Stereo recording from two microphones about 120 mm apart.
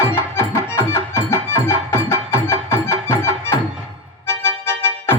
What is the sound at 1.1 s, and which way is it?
Music, 25° left (ahead or behind).